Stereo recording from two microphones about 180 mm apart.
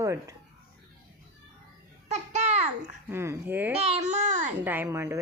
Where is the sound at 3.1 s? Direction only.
15° right (ahead or behind).